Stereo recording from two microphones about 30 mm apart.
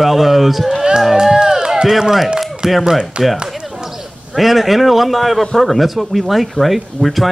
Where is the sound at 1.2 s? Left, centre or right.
Centre.